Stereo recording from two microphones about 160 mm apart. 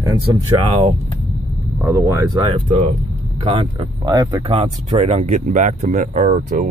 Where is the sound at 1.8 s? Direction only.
15° right (ahead or behind); by 3.9 s 35° right (ahead or behind).